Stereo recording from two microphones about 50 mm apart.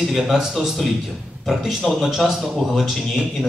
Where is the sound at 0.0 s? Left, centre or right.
Centre.